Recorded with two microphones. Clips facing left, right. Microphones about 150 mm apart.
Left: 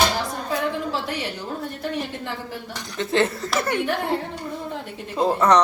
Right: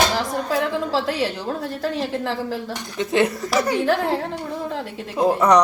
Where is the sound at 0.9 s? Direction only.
90° right.